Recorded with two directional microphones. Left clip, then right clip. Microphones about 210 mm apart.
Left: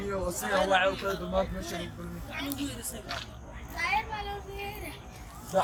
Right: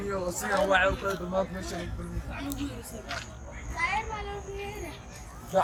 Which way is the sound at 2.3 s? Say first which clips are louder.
Left 1 dB; 50° left (ahead or behind).